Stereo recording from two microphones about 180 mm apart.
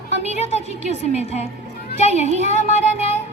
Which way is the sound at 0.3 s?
35° left (ahead or behind).